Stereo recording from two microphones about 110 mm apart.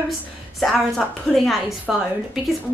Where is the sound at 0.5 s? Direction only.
Centre (ahead or behind).